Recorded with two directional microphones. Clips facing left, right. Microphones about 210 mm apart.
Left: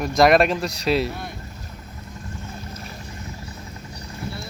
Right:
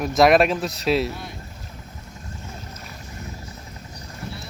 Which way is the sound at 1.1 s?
55° left (ahead or behind).